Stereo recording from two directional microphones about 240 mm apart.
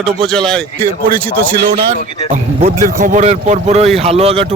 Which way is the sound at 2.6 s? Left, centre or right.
Right.